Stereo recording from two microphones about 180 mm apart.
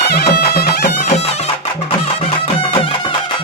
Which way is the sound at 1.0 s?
35° left (ahead or behind).